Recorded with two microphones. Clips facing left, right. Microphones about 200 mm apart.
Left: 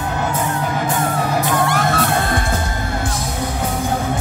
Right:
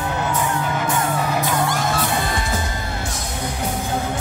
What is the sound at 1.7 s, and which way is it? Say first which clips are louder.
Music: left 4 dB; 60° left (ahead or behind).